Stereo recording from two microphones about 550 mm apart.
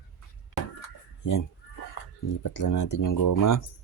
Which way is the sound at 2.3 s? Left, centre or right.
Left.